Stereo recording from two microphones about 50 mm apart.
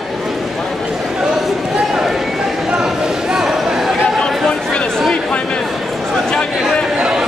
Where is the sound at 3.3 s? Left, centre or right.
Centre.